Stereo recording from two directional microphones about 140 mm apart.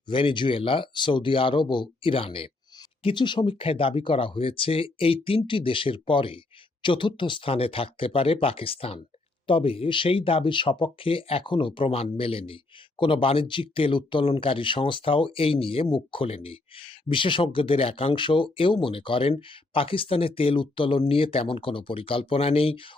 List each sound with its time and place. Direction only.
0.1 s speech: 35° left (ahead or behind)